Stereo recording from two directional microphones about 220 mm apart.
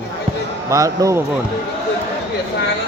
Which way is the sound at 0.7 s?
15° right (ahead or behind).